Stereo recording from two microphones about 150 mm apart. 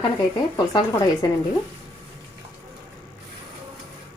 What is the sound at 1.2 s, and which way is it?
Speech, 25° left (ahead or behind).